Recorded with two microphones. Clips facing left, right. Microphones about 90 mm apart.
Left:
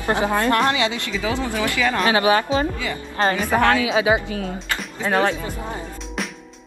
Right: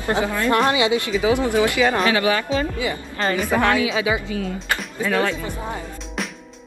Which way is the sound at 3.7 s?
30° left (ahead or behind).